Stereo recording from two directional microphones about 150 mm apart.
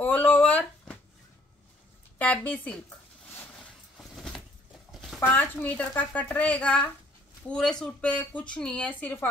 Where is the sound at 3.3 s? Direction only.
10° left (ahead or behind).